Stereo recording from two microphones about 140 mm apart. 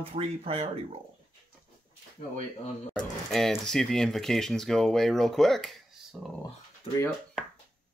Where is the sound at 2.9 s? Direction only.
Centre (ahead or behind).